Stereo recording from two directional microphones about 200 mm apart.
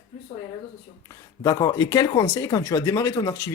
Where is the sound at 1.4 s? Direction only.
15° left (ahead or behind).